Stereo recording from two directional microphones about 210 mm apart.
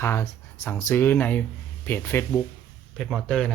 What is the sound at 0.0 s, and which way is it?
Speech, 10° left (ahead or behind).